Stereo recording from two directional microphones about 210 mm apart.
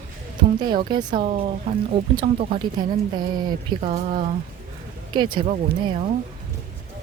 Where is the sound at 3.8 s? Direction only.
30° right (ahead or behind).